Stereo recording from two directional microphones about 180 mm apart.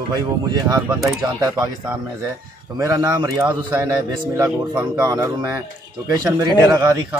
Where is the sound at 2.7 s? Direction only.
20° right (ahead or behind).